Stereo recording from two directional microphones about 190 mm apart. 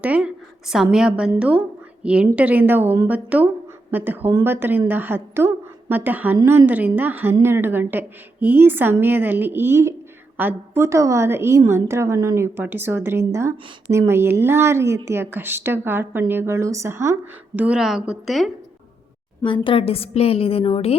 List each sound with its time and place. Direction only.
0.0 s a woman's voice: 5° right (ahead or behind)
19.5 s a woman's voice: 30° left (ahead or behind)